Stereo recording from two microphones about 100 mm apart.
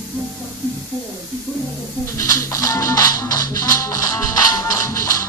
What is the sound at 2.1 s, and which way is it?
Music, 30° left (ahead or behind).